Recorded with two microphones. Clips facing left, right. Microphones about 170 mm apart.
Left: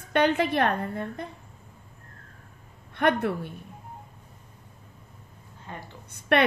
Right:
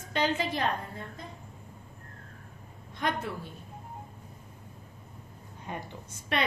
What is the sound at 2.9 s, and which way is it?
Speech, 60° left (ahead or behind).